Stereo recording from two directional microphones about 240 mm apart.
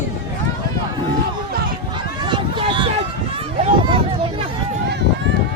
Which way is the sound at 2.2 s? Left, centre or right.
Centre.